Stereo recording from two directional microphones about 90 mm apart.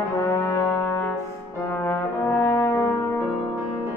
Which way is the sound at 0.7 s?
20° left (ahead or behind).